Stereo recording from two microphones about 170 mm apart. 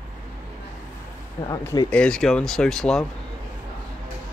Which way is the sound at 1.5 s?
25° left (ahead or behind).